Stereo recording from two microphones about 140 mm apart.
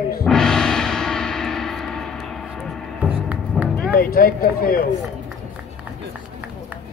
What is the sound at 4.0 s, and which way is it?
Speech, 90° left.